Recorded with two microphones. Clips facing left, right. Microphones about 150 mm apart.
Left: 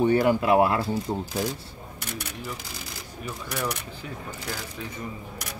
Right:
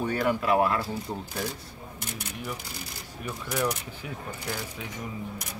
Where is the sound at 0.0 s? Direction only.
25° left (ahead or behind).